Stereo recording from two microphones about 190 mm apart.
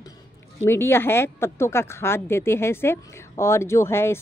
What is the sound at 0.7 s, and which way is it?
Speech, 10° left (ahead or behind).